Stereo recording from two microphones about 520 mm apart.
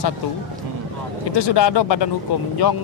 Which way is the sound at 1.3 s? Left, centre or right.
Left.